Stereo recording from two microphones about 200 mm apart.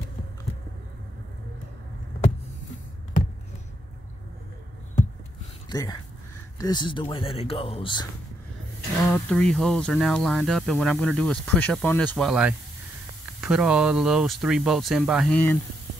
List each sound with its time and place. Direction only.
5.7 s speech: 20° left (ahead or behind)
9.1 s speech: 5° left (ahead or behind)
12.3 s speech: 5° right (ahead or behind)